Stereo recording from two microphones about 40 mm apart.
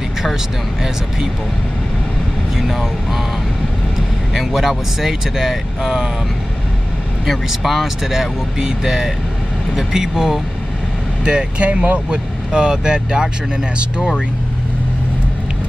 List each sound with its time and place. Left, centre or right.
2.5 s speech: centre
4.3 s speech: centre
7.2 s speech: centre
11.2 s speech: right
12.1 s speech: centre